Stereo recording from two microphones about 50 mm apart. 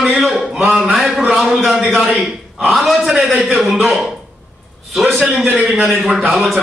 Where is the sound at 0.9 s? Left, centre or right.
Centre.